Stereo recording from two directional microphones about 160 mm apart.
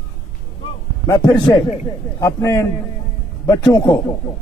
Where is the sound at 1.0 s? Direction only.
20° left (ahead or behind).